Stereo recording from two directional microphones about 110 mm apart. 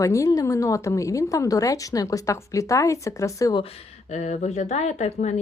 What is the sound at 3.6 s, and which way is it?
Speech, 90° left.